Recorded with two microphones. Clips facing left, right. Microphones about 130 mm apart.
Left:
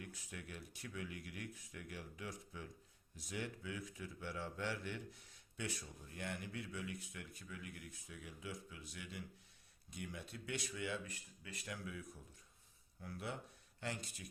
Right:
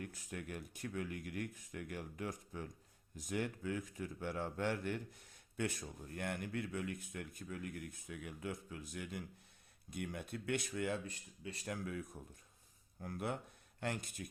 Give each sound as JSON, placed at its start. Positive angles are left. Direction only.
{"t": 0.0, "sound": "speech", "side_deg": -45}
{"t": 11.0, "sound": "speech", "side_deg": -30}
{"t": 11.6, "sound": "speech", "side_deg": -45}